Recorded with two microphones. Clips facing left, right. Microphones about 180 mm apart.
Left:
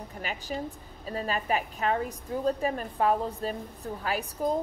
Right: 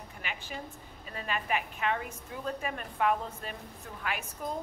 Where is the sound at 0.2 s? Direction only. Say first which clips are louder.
Left 7 dB; 40° left (ahead or behind).